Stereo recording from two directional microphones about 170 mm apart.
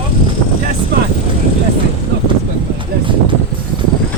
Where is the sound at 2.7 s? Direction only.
30° right (ahead or behind).